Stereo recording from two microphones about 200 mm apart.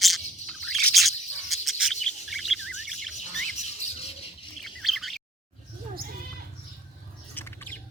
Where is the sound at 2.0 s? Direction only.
Centre (ahead or behind).